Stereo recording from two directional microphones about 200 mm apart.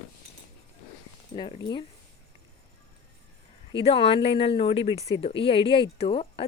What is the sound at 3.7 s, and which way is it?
Speech, 25° left (ahead or behind).